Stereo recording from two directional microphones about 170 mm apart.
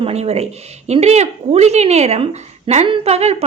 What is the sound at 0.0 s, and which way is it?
A woman's voice, 40° right (ahead or behind).